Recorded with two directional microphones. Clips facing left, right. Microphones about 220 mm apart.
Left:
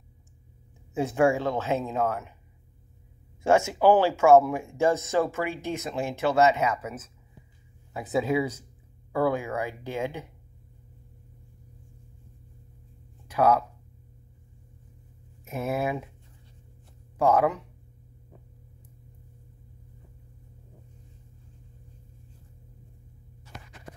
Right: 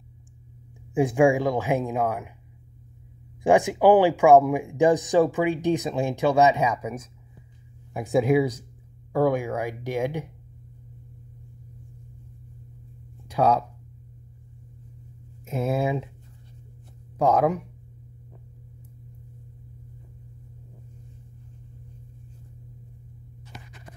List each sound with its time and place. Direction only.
0.9 s speech: 15° right (ahead or behind)
3.4 s speech: 15° right (ahead or behind)
13.3 s speech: 15° right (ahead or behind)
15.5 s speech: 15° right (ahead or behind)
17.2 s speech: 10° right (ahead or behind)